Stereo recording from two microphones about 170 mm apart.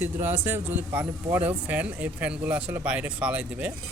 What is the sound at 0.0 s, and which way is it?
A man's voice, 10° right (ahead or behind).